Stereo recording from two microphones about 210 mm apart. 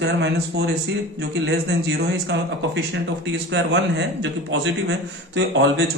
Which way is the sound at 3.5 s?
60° right (ahead or behind).